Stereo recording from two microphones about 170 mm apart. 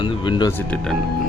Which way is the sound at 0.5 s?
5° left (ahead or behind).